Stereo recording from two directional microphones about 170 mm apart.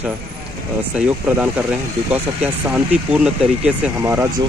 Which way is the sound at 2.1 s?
10° right (ahead or behind).